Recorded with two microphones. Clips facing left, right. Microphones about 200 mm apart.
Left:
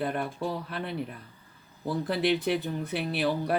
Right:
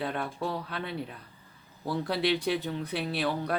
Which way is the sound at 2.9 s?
60° left (ahead or behind).